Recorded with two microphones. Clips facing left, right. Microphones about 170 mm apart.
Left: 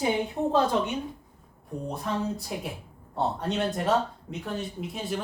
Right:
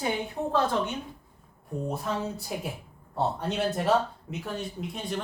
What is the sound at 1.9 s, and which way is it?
Speech, centre (ahead or behind).